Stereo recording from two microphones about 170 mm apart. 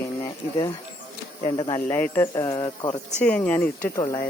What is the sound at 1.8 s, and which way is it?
Speech, 10° left (ahead or behind).